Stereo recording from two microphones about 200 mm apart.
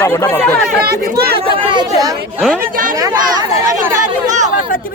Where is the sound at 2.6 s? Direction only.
45° right (ahead or behind).